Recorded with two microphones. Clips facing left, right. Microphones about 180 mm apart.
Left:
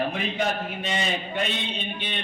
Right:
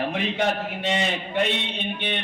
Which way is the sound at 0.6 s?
75° right (ahead or behind).